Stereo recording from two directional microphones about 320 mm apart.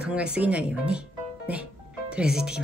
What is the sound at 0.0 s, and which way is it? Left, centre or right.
Speech, centre.